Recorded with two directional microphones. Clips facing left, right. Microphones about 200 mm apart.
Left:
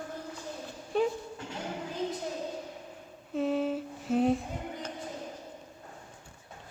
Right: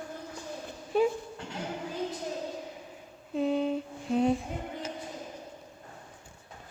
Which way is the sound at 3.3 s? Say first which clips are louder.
Right 1 dB; centre (ahead or behind).